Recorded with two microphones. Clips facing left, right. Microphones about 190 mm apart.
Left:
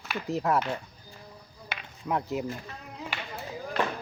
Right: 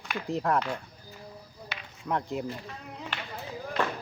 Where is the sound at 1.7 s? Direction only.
55° left (ahead or behind).